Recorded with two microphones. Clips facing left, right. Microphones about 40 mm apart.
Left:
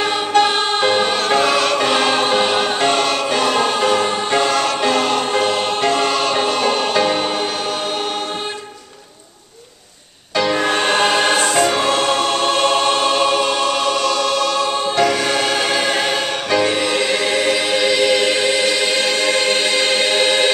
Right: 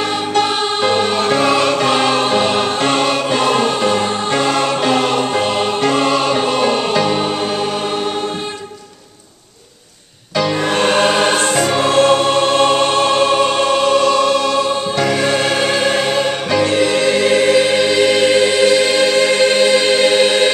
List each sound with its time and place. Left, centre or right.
0.3 s music: centre
1.2 s music: centre
1.8 s choir: centre
2.1 s music: centre
2.9 s music: centre
4.6 s music: centre
6.9 s music: centre
10.3 s music: centre
12.2 s choir: centre
12.4 s music: centre
13.7 s music: centre
15.2 s music: centre
16.8 s choir: centre